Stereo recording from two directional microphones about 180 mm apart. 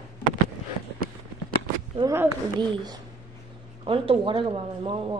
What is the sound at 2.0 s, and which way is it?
Speech, 20° right (ahead or behind).